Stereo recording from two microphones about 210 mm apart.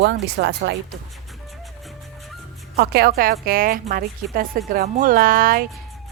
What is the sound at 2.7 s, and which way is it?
A woman's voice, 50° right (ahead or behind).